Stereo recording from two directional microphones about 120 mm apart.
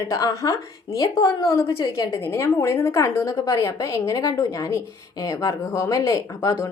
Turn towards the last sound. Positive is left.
turn(degrees=25)  # may be behind; listen again after turning